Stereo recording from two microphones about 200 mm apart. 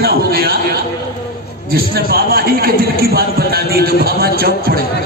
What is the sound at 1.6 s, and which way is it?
A man's voice, 50° right (ahead or behind).